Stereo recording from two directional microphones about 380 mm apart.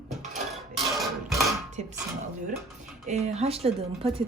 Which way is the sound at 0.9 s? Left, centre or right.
Centre.